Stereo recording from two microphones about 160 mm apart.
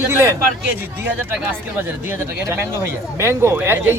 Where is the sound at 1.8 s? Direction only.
15° right (ahead or behind).